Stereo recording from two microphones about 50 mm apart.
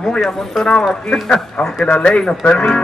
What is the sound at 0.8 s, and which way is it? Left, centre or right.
Speech, centre.